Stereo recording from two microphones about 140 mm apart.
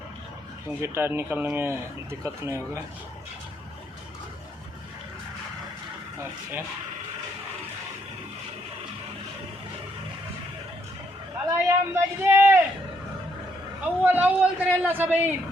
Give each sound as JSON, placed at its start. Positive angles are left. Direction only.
{"t": 0.8, "sound": "speech", "side_deg": -15}
{"t": 11.4, "sound": "a sound", "side_deg": -20}
{"t": 13.8, "sound": "speech", "side_deg": -10}